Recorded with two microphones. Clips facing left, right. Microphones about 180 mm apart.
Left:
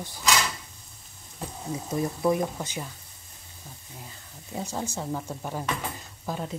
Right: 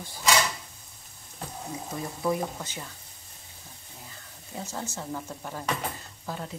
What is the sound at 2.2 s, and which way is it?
Speech, 20° left (ahead or behind).